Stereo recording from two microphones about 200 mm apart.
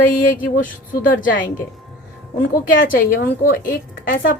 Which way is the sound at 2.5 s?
45° left (ahead or behind).